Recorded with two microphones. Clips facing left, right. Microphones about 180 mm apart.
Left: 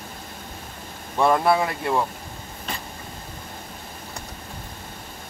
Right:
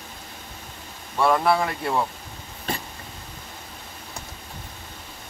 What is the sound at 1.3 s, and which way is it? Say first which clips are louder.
Speech: left 1 dB; 5° left (ahead or behind).